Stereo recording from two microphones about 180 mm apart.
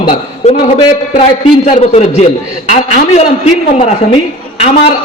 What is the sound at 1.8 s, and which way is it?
A man's voice, 35° left (ahead or behind).